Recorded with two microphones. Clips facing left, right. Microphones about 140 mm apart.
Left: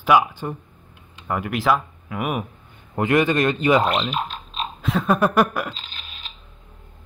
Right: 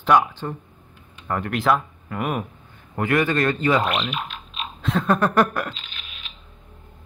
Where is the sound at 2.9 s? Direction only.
20° left (ahead or behind).